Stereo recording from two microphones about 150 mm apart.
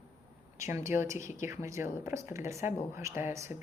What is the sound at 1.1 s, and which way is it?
Speech, 55° left (ahead or behind).